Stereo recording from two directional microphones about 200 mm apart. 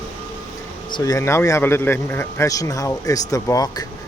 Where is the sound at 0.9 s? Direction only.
15° left (ahead or behind).